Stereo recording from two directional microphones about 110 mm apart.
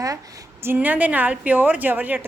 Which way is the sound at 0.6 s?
15° right (ahead or behind).